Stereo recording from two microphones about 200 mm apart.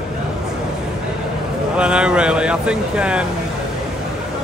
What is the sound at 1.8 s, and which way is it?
Speech, 5° right (ahead or behind).